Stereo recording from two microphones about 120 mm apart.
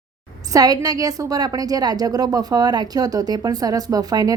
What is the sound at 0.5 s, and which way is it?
A woman's voice, 30° right (ahead or behind).